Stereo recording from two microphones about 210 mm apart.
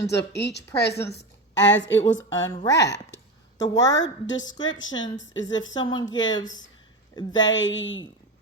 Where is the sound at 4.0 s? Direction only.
60° left (ahead or behind).